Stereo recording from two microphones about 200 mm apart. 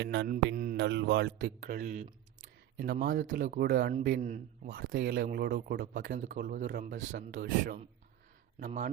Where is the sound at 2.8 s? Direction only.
50° right (ahead or behind).